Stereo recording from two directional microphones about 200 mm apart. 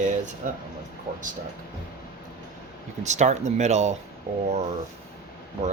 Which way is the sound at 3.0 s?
35° right (ahead or behind).